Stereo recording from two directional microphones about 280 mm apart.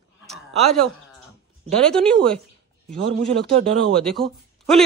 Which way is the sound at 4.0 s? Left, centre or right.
Centre.